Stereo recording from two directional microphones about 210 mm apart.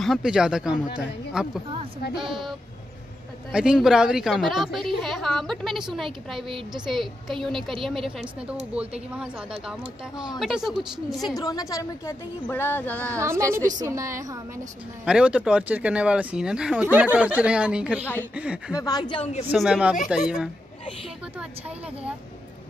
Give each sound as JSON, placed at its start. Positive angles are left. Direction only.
{"t": 0.0, "sound": "speech", "side_deg": 0}
{"t": 3.5, "sound": "speech", "side_deg": -5}
{"t": 11.3, "sound": "speech", "side_deg": 15}
{"t": 13.1, "sound": "a woman's voice", "side_deg": -15}
{"t": 15.0, "sound": "speech", "side_deg": -5}
{"t": 18.8, "sound": "speech", "side_deg": 20}
{"t": 19.4, "sound": "speech", "side_deg": -5}
{"t": 21.4, "sound": "speech", "side_deg": -5}